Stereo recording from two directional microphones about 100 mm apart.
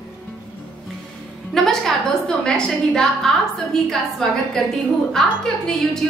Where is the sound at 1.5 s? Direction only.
5° left (ahead or behind).